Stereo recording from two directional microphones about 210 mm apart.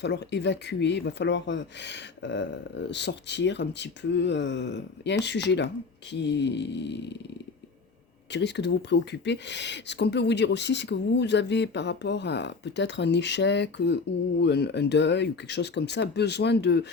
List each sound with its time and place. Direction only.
0.0 s speech: 55° left (ahead or behind)
8.3 s speech: 55° left (ahead or behind)